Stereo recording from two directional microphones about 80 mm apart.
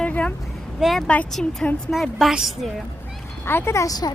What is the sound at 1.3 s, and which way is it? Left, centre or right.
A woman's voice, centre.